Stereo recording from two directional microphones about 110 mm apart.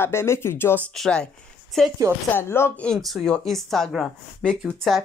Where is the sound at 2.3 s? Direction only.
20° left (ahead or behind).